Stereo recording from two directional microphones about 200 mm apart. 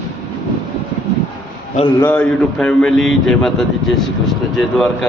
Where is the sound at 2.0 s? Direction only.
5° left (ahead or behind).